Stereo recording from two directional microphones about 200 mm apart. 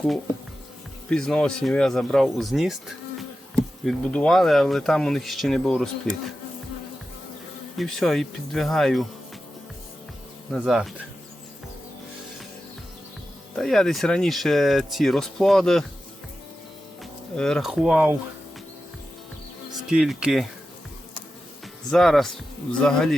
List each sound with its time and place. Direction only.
1.1 s speech: 5° left (ahead or behind)
7.8 s speech: centre (ahead or behind)
10.5 s speech: 5° right (ahead or behind)
13.6 s speech: centre (ahead or behind)
17.3 s speech: 5° left (ahead or behind)
19.9 s speech: 5° right (ahead or behind)
21.8 s speech: centre (ahead or behind)